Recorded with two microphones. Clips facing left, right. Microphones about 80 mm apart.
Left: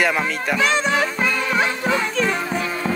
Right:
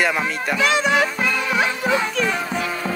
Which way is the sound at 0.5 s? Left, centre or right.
Left.